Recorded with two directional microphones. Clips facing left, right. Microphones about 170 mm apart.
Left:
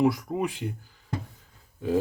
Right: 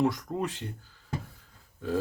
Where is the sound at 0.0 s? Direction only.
10° left (ahead or behind).